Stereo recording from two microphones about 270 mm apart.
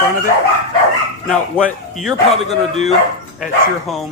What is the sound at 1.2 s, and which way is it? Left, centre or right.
Speech, centre.